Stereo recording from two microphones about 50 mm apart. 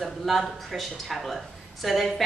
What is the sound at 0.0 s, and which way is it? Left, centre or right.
Speech, centre.